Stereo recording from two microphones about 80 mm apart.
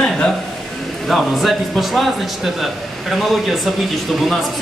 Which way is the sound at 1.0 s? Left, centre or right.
Centre.